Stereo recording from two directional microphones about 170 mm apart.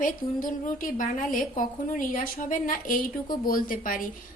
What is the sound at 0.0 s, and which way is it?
A woman's voice, 50° left (ahead or behind).